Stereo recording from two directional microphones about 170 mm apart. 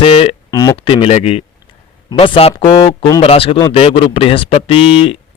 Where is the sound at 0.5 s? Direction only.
20° left (ahead or behind).